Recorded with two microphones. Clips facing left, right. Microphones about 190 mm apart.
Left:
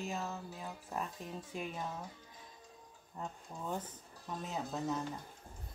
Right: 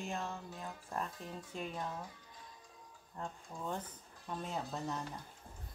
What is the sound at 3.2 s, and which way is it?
Speech, 5° left (ahead or behind).